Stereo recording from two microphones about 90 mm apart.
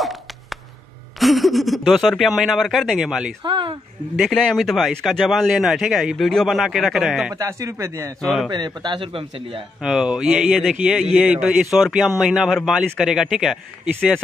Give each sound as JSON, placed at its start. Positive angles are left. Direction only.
{"t": 0.0, "sound": "a sound", "side_deg": 0}
{"t": 1.2, "sound": "a man's voice", "side_deg": 0}
{"t": 3.4, "sound": "speech", "side_deg": -65}
{"t": 4.2, "sound": "a man's voice", "side_deg": 5}
{"t": 7.3, "sound": "speech", "side_deg": -35}
{"t": 8.2, "sound": "a man's voice", "side_deg": 5}
{"t": 8.5, "sound": "speech", "side_deg": -55}
{"t": 9.8, "sound": "a man's voice", "side_deg": -5}